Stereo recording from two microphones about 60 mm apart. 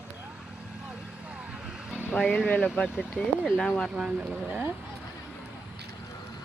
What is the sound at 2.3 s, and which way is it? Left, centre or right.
Speech, left.